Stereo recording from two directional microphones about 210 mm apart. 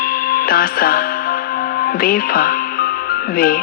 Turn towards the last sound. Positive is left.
turn(degrees=45)  # may be behind; listen again after turning